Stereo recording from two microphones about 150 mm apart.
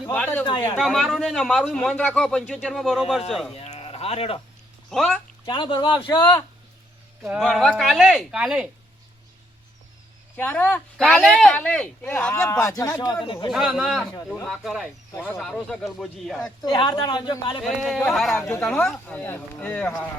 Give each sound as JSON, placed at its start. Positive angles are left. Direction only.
{"t": 0.1, "sound": "speech", "side_deg": 10}
{"t": 0.4, "sound": "speech", "side_deg": 30}
{"t": 0.8, "sound": "a man's voice", "side_deg": 0}
{"t": 3.5, "sound": "a sound", "side_deg": 45}
{"t": 4.9, "sound": "a man's voice", "side_deg": 0}
{"t": 5.5, "sound": "speech", "side_deg": 30}
{"t": 7.2, "sound": "a man's voice", "side_deg": 0}
{"t": 10.3, "sound": "speech", "side_deg": 10}
{"t": 11.0, "sound": "a man's voice", "side_deg": 0}
{"t": 13.5, "sound": "a man's voice", "side_deg": 0}
{"t": 16.6, "sound": "speech", "side_deg": 30}
{"t": 17.6, "sound": "a man's voice", "side_deg": 0}